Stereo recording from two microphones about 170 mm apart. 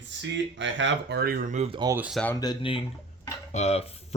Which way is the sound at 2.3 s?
25° left (ahead or behind).